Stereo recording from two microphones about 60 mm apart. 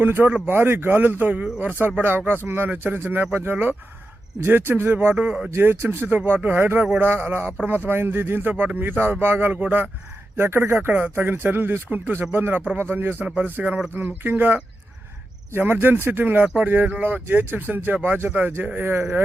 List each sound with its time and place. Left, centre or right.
0.0 s speech: right
5.1 s speech: centre
5.5 s speech: right
10.3 s speech: right
10.8 s speech: right
13.2 s speech: right